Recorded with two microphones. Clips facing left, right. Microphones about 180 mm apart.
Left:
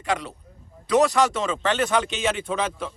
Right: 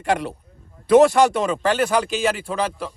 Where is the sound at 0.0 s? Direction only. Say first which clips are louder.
Right 5 dB; 60° right (ahead or behind).